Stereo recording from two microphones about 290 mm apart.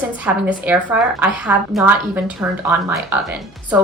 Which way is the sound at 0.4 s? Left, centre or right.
Centre.